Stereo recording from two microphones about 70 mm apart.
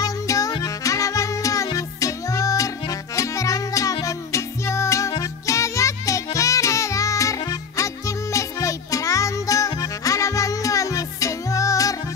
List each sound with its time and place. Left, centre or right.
0.0 s music: left